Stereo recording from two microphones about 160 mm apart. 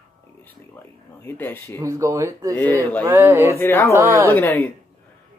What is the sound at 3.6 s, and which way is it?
Speech, 15° left (ahead or behind).